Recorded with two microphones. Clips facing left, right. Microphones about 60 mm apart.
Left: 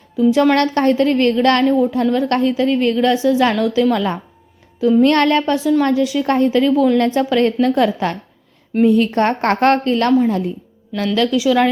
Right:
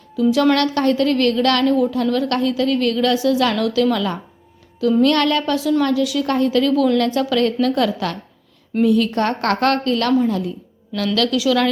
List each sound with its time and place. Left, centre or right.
0.2 s a woman's voice: left